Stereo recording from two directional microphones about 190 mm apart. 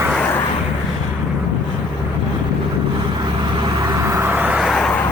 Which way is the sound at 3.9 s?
15° right (ahead or behind).